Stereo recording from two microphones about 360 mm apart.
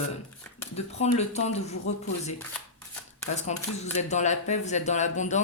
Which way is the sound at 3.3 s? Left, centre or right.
Centre.